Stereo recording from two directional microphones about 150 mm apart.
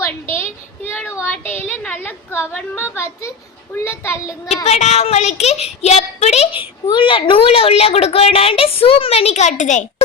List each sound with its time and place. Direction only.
0.0 s a sound: 15° left (ahead or behind)
2.6 s a woman's voice: 15° left (ahead or behind)
4.4 s speech: 45° left (ahead or behind)
6.9 s a woman's voice: 35° left (ahead or behind); by 9.8 s 55° left (ahead or behind)